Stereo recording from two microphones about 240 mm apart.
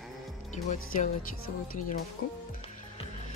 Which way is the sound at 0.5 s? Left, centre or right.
Left.